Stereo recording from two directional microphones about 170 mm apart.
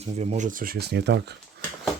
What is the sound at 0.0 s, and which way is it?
Speech, 40° right (ahead or behind).